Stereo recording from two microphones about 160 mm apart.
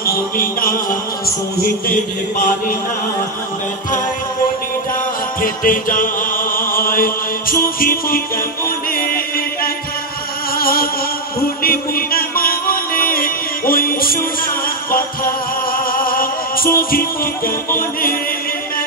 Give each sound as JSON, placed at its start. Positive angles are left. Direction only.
{"t": 0.0, "sound": "music", "side_deg": 65}
{"t": 1.9, "sound": "mantra", "side_deg": 55}
{"t": 5.4, "sound": "music", "side_deg": 60}